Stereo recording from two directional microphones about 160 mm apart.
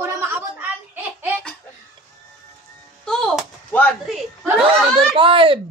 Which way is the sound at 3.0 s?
5° left (ahead or behind).